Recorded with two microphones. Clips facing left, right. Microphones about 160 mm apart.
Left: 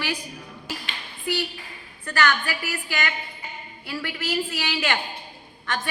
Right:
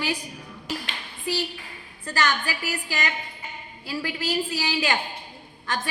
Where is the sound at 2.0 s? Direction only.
30° right (ahead or behind).